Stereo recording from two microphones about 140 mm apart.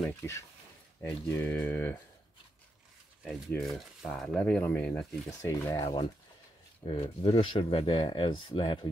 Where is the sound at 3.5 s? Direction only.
Centre (ahead or behind).